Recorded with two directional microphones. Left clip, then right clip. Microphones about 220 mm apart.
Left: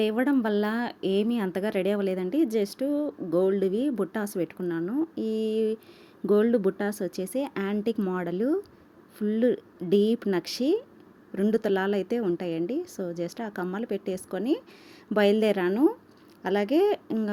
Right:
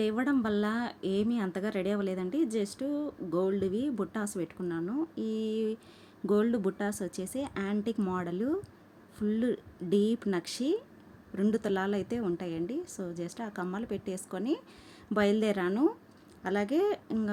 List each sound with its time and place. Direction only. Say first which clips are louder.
0.0 s a woman's voice: left 5 dB; 5° left (ahead or behind)